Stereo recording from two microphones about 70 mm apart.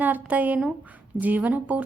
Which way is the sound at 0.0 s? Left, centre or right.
Right.